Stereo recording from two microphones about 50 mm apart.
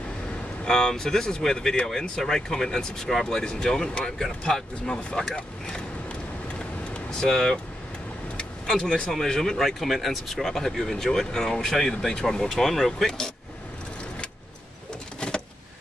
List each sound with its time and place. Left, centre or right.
0.7 s speech: centre
6.9 s vehicle: centre
8.6 s speech: centre
15.1 s a sound: centre